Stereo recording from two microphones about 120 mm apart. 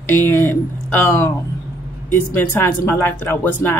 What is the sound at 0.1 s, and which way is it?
Speech, 20° left (ahead or behind).